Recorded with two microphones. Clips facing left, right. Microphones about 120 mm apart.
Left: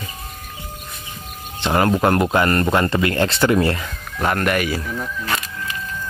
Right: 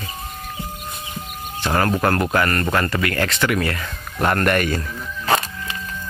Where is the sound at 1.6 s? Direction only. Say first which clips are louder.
Left 2 dB; 20° left (ahead or behind).